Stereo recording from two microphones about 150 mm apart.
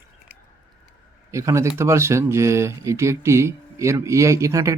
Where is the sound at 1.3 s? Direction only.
20° right (ahead or behind).